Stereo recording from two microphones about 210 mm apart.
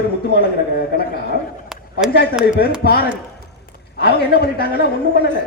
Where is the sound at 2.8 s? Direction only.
45° left (ahead or behind).